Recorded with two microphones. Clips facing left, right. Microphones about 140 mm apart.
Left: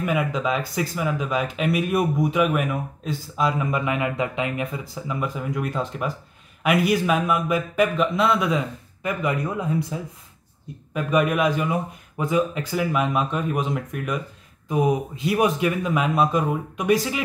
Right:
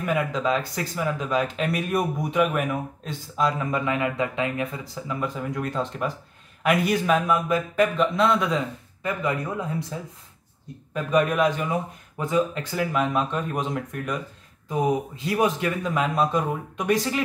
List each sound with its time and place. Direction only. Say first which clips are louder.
0.0 s speech: left 1 dB; 5° left (ahead or behind)